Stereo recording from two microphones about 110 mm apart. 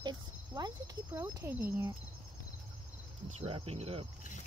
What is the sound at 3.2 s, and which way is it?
Speech, 65° right (ahead or behind).